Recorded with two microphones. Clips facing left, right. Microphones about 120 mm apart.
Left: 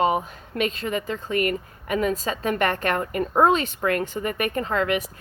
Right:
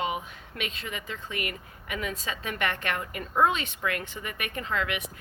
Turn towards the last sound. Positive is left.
turn(degrees=40)  # may be behind; listen again after turning